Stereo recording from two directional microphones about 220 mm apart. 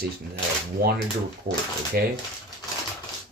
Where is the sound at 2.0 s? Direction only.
45° right (ahead or behind).